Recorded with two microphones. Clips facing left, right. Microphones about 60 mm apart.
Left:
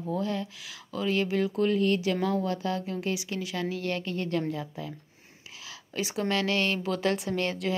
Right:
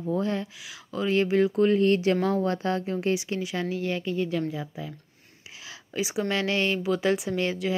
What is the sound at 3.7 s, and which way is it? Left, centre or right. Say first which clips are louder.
Speech: right 3 dB; centre.